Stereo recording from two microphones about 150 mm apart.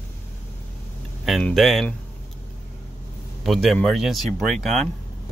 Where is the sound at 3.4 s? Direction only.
Centre (ahead or behind).